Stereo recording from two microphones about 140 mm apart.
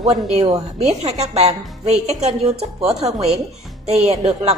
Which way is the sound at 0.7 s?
50° right (ahead or behind).